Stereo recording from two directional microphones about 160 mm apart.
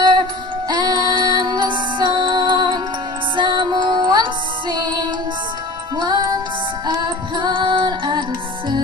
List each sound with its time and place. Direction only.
0.7 s music: 25° right (ahead or behind)